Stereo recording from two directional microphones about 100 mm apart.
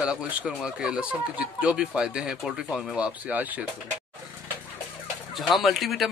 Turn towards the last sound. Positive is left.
turn(degrees=0)  # may be behind; listen again after turning